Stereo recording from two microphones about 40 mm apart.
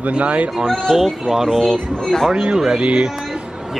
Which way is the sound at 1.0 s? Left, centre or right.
Centre.